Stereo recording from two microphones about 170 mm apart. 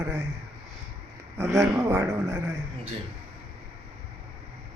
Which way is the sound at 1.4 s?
15° right (ahead or behind).